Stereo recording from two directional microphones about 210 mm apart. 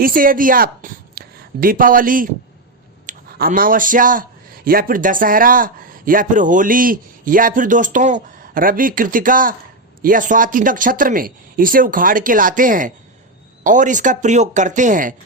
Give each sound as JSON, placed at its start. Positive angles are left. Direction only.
{"t": 0.0, "sound": "a man's voice", "side_deg": -40}